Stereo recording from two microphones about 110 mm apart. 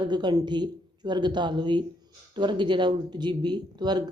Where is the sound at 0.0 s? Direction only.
40° right (ahead or behind).